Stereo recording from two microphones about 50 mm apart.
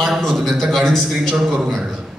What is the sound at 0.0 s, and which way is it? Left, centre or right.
A man's voice, centre.